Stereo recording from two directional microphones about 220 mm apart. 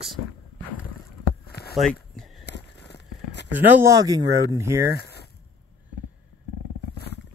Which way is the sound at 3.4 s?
10° right (ahead or behind).